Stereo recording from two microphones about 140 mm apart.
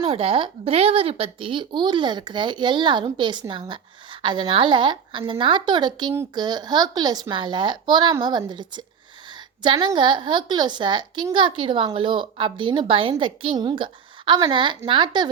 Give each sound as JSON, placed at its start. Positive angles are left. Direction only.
{"t": 0.0, "sound": "speech", "side_deg": -45}